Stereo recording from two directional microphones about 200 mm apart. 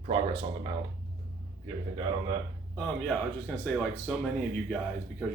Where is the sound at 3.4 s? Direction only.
5° left (ahead or behind).